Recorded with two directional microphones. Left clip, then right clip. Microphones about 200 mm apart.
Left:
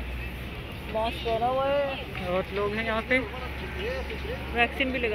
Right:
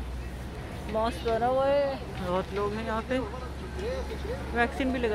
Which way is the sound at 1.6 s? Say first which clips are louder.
Right 1 dB; 35° right (ahead or behind).